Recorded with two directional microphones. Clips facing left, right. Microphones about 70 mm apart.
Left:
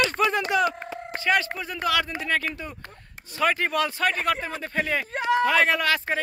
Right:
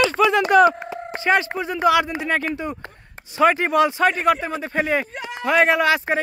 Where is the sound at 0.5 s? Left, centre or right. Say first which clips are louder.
Right 11 dB; right.